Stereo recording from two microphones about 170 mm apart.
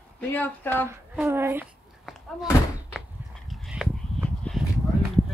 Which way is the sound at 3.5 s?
Centre (ahead or behind).